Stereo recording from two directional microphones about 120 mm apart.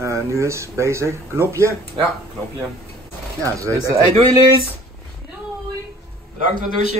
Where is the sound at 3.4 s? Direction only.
25° right (ahead or behind).